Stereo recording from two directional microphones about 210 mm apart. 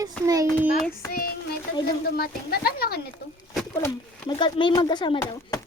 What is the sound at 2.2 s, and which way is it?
Speech, 45° left (ahead or behind).